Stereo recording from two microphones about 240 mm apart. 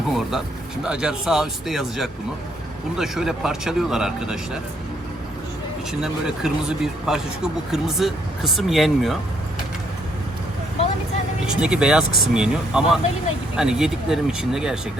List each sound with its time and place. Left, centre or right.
0.1 s speech: centre
5.9 s speech: centre
11.4 s speech: centre